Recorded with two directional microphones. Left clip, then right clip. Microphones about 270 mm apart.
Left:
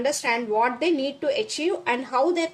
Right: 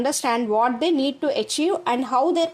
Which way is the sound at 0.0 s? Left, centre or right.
Centre.